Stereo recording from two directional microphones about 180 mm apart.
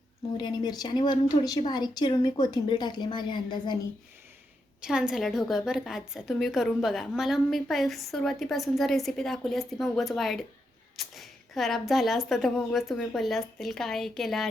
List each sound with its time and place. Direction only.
0.3 s speech: 25° left (ahead or behind)
4.8 s a woman's voice: 5° right (ahead or behind)